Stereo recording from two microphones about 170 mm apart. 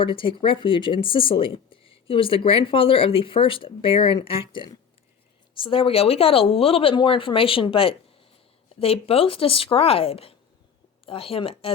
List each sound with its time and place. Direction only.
0.0 s speech: 30° left (ahead or behind)